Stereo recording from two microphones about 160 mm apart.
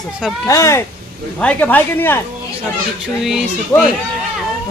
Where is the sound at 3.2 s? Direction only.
Centre (ahead or behind).